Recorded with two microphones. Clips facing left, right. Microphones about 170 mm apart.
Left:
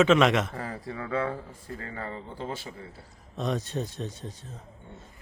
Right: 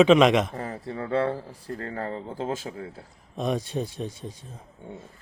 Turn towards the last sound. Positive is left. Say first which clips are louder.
# right 3 dB
turn(degrees=-10)  # may be behind; listen again after turning